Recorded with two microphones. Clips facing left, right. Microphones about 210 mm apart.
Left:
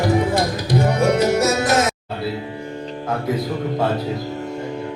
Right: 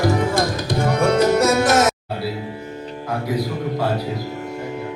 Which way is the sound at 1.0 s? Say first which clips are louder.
Right 3 dB; 55° right (ahead or behind).